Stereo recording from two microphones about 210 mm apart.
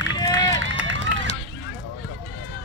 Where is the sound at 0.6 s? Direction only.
65° right (ahead or behind).